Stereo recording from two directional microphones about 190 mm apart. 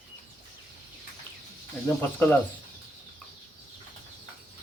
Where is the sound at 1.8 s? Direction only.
10° left (ahead or behind).